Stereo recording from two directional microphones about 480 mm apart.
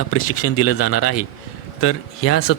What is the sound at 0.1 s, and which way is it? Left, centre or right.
Speech, left.